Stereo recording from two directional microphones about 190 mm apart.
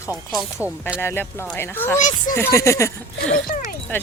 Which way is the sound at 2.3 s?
15° left (ahead or behind).